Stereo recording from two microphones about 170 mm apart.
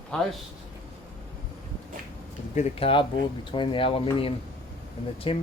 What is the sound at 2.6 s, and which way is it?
Speech, 35° left (ahead or behind).